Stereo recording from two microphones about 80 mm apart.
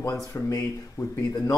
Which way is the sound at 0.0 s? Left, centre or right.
Left.